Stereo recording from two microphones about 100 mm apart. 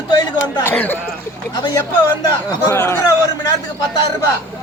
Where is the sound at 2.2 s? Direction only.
25° left (ahead or behind).